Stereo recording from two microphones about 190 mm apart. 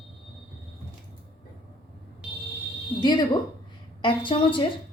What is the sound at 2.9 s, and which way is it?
A woman's voice, 25° left (ahead or behind).